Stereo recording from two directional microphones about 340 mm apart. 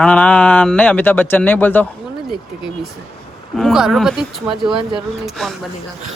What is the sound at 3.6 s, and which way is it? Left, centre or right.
Speech, centre.